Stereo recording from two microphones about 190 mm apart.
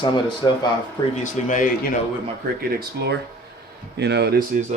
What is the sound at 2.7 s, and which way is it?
Speech, 60° right (ahead or behind).